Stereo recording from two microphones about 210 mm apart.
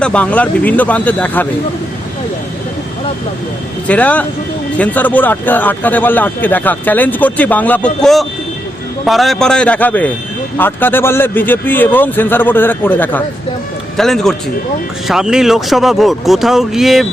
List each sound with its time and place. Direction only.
0.0 s a man's voice: 5° left (ahead or behind)
3.8 s a man's voice: 5° left (ahead or behind)